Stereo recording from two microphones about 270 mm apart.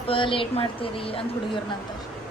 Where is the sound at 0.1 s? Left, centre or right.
Centre.